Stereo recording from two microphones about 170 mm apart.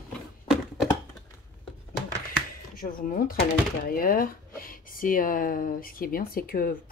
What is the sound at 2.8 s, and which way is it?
Speech, 55° left (ahead or behind).